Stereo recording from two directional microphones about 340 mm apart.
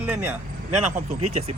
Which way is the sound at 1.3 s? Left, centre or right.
Centre.